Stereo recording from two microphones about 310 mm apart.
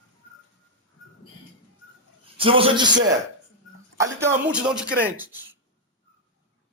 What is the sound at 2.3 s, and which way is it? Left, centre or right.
Speech, centre.